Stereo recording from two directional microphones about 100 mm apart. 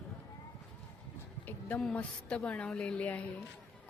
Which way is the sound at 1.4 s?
15° left (ahead or behind).